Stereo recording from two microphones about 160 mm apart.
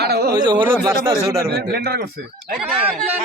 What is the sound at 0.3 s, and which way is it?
Speech, 30° right (ahead or behind).